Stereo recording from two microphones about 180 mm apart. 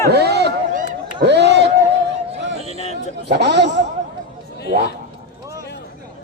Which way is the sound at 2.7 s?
35° left (ahead or behind).